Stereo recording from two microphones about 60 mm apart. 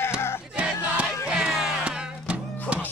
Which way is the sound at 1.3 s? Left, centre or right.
Centre.